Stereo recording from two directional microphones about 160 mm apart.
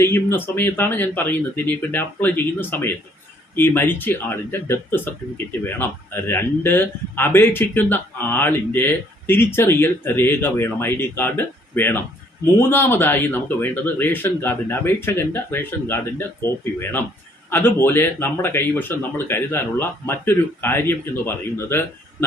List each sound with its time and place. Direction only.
0.0 s speech: 15° left (ahead or behind)
17.5 s speech: 15° left (ahead or behind)